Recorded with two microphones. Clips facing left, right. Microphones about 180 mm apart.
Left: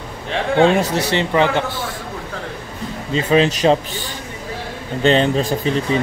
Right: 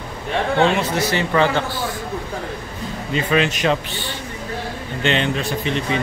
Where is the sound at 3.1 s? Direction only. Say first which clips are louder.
Left 4 dB; 30° left (ahead or behind).